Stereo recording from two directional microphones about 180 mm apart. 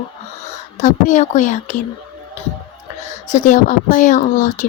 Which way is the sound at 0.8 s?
45° left (ahead or behind).